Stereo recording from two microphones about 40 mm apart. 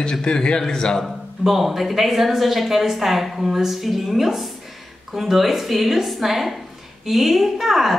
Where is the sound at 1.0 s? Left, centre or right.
Centre.